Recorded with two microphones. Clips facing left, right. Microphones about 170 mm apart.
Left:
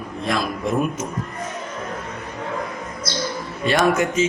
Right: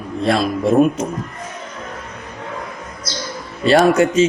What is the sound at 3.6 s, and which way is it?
Speech, 30° right (ahead or behind).